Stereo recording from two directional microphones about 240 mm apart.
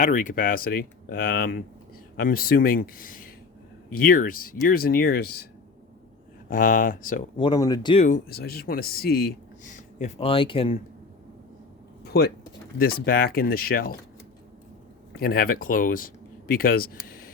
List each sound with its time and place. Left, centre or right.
0.0 s speech: left
6.5 s speech: left
7.3 s speech: centre
8.0 s speech: left
12.0 s speech: left
15.1 s speech: left